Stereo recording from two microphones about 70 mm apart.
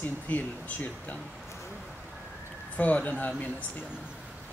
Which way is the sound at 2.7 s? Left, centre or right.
Left.